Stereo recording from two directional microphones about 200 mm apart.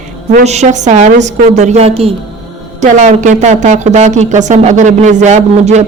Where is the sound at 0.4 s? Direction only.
35° right (ahead or behind).